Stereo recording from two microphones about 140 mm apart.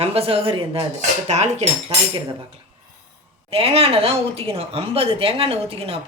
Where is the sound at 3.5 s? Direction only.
45° right (ahead or behind).